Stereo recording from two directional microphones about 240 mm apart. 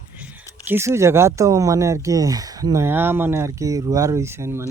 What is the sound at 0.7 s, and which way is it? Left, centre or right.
Speech, centre.